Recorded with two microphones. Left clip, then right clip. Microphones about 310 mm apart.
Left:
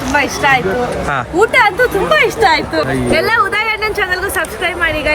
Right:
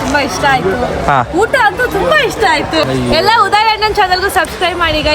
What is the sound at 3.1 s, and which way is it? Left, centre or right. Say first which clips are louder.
A woman's voice: right 4 dB; centre.